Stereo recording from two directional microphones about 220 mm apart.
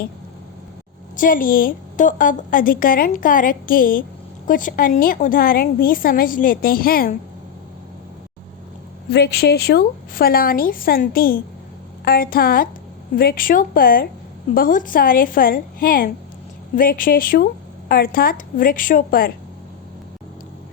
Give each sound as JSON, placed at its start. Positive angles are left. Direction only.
{"t": 1.1, "sound": "a woman's voice", "side_deg": 40}
{"t": 9.1, "sound": "a woman's voice", "side_deg": 50}